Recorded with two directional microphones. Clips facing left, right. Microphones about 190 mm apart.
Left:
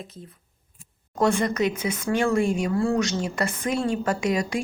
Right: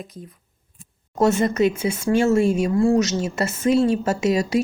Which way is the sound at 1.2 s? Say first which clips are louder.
Right 4 dB; 25° right (ahead or behind).